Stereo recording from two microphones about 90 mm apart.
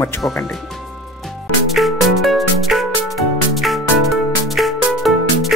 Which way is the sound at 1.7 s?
Centre (ahead or behind).